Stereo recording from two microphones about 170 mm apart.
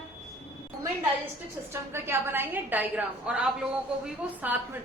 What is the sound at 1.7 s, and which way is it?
A woman's voice, 15° right (ahead or behind).